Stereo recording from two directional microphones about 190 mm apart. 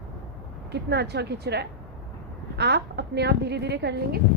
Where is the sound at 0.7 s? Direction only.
60° right (ahead or behind).